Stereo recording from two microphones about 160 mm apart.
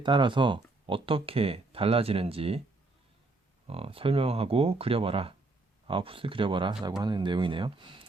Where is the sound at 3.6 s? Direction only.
35° right (ahead or behind).